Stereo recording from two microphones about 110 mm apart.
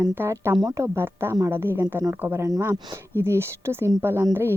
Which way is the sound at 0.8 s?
25° right (ahead or behind).